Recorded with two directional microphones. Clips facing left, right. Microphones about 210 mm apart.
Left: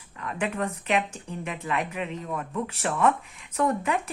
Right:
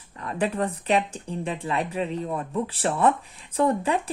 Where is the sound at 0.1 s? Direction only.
35° right (ahead or behind).